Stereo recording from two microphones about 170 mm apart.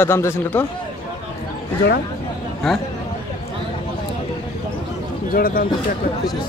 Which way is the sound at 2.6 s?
Centre (ahead or behind).